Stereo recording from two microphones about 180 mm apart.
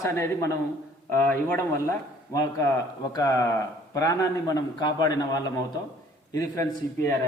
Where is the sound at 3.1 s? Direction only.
20° left (ahead or behind).